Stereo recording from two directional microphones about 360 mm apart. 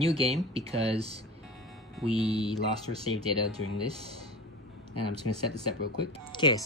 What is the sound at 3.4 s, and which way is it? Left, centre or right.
Speech, left.